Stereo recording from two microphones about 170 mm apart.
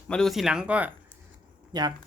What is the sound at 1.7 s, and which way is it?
Speech, 25° right (ahead or behind).